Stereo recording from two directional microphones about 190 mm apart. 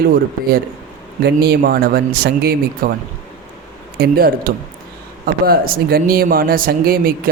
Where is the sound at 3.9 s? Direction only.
55° right (ahead or behind).